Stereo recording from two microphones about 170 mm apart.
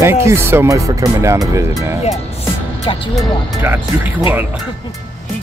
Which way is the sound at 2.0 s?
35° left (ahead or behind).